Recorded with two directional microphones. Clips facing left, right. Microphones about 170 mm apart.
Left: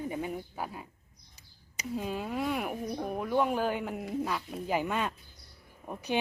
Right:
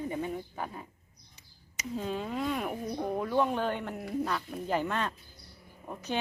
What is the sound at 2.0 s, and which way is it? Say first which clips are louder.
Speech: even; 10° left (ahead or behind).